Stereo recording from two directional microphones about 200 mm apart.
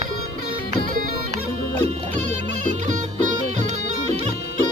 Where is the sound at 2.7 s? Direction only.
35° right (ahead or behind).